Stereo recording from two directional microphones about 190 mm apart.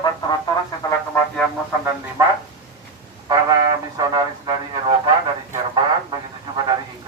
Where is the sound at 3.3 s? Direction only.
20° right (ahead or behind).